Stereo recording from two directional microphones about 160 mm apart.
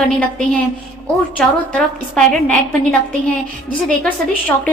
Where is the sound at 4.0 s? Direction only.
10° left (ahead or behind).